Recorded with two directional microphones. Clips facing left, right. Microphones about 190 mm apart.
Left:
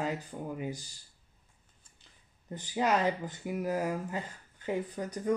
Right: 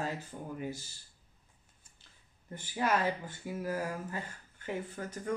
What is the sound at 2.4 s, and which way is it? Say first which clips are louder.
Speech: left 3 dB; 20° left (ahead or behind).